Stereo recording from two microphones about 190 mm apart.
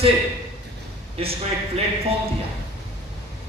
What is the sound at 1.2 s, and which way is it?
Speech, 30° right (ahead or behind).